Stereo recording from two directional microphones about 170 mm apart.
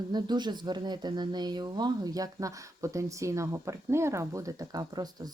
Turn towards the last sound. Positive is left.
turn(degrees=-25)  # may be behind; listen again after turning